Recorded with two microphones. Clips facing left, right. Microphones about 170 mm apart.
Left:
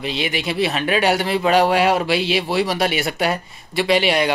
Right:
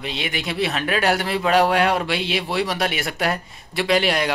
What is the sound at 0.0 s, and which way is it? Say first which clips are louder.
A man's voice: left 4 dB; 5° left (ahead or behind).